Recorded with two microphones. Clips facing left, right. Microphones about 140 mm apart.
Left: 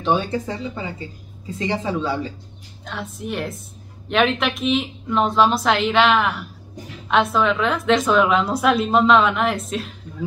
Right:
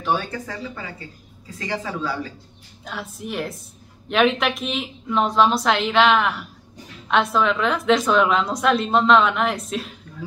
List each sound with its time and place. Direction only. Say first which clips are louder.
0.0 s speech: left 4 dB; 20° left (ahead or behind)
2.8 s a woman's voice: left 2 dB; centre (ahead or behind)